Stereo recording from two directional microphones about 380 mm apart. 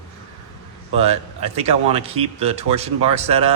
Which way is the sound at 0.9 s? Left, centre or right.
Centre.